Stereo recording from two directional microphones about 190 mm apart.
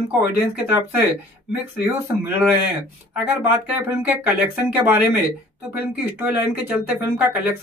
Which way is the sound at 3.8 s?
10° right (ahead or behind).